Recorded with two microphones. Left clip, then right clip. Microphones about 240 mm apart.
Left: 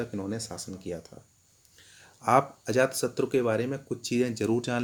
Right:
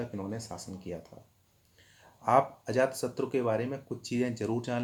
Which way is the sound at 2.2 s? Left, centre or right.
Left.